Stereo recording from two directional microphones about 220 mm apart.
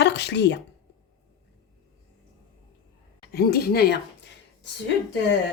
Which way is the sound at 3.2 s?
45° left (ahead or behind).